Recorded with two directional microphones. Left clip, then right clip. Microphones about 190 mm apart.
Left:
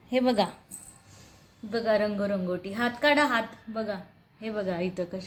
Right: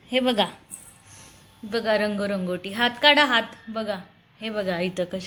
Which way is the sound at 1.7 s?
10° right (ahead or behind).